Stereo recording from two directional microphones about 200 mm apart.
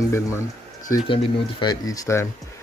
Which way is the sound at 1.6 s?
20° left (ahead or behind).